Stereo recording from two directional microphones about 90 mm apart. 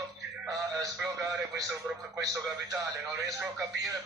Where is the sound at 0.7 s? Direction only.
40° right (ahead or behind).